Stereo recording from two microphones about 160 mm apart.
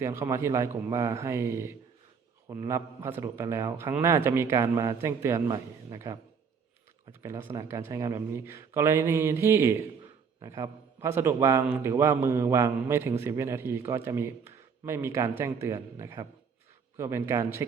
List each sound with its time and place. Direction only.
0.0 s a man's voice: 15° right (ahead or behind)